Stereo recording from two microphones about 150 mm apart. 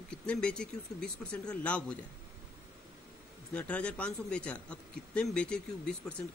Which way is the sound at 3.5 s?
10° left (ahead or behind).